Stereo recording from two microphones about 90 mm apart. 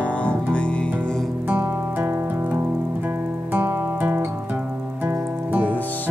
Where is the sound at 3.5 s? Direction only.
20° right (ahead or behind).